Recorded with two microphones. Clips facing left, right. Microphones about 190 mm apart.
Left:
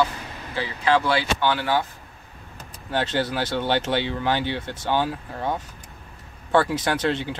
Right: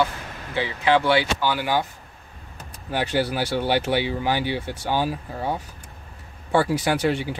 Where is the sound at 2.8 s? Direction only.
10° right (ahead or behind).